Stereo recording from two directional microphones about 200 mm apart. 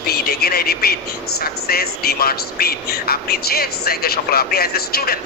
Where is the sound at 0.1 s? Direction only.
50° left (ahead or behind).